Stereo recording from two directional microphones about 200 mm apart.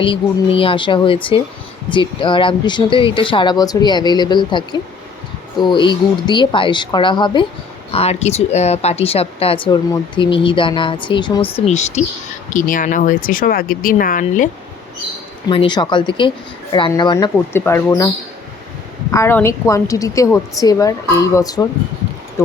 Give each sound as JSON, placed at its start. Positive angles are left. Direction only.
{"t": 0.0, "sound": "speech", "side_deg": 25}
{"t": 15.4, "sound": "a woman's voice", "side_deg": 25}
{"t": 19.1, "sound": "a woman's voice", "side_deg": 15}